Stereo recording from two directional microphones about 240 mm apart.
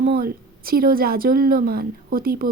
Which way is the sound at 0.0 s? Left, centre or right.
Right.